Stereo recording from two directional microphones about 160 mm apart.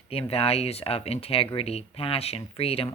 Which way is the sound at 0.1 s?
40° left (ahead or behind).